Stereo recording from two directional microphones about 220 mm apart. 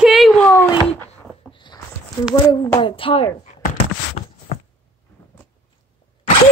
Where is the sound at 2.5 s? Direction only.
20° left (ahead or behind).